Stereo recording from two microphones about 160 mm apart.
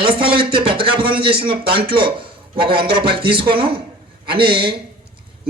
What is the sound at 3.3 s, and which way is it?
Speech, 35° right (ahead or behind).